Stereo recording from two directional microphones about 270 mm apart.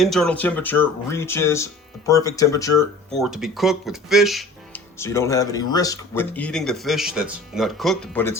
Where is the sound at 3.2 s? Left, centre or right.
Centre.